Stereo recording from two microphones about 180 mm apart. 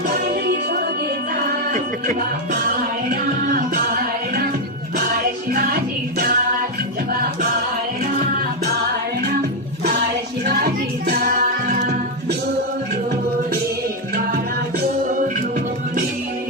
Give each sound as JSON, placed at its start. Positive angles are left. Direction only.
{"t": 0.1, "sound": "music", "side_deg": -60}
{"t": 1.7, "sound": "speech", "side_deg": -50}
{"t": 3.1, "sound": "music", "side_deg": -55}
{"t": 10.4, "sound": "music", "side_deg": -55}